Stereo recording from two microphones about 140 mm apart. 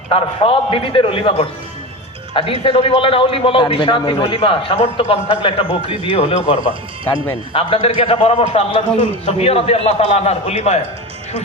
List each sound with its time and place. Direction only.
0.1 s a man's voice: 40° left (ahead or behind)
6.1 s a man's voice: 50° left (ahead or behind)
7.5 s a man's voice: 45° left (ahead or behind)